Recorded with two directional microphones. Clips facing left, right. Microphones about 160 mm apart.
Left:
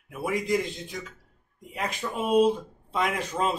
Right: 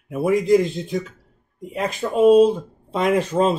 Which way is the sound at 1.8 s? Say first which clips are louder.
Right 12 dB; 30° right (ahead or behind).